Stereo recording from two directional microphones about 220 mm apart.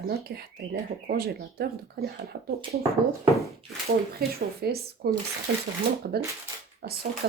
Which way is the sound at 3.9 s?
45° right (ahead or behind).